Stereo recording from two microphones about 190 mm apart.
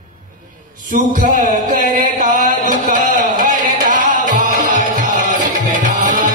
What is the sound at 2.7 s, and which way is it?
Music, 45° right (ahead or behind).